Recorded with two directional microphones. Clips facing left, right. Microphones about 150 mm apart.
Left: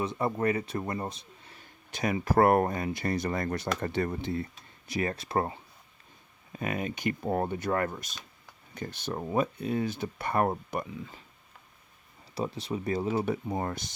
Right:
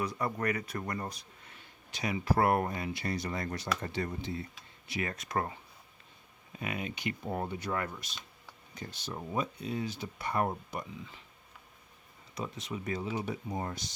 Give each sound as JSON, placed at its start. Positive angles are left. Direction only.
{"t": 0.0, "sound": "a man's voice", "side_deg": 25}
{"t": 1.5, "sound": "speech", "side_deg": 50}
{"t": 4.9, "sound": "speech", "side_deg": 35}
{"t": 6.6, "sound": "speech", "side_deg": 45}
{"t": 12.3, "sound": "speech", "side_deg": 35}